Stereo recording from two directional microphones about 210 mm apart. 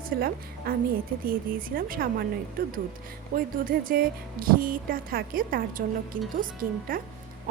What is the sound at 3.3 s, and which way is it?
A woman's voice, 40° right (ahead or behind).